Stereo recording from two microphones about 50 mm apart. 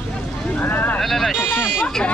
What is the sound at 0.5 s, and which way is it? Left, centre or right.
Speech, left.